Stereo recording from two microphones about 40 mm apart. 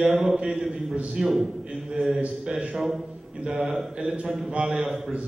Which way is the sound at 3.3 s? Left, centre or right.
Right.